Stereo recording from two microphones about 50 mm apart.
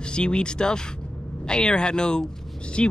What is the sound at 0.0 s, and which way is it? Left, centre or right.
Speech, centre.